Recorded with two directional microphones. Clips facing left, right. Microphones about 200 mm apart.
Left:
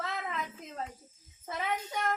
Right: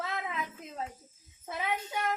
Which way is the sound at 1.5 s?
5° right (ahead or behind).